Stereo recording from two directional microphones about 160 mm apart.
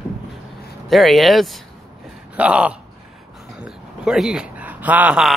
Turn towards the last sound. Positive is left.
turn(degrees=-5)  # may be behind; listen again after turning